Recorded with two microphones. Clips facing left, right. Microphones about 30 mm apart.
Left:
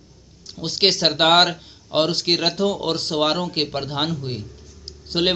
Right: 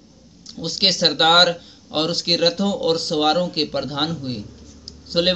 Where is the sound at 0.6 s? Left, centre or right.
Left.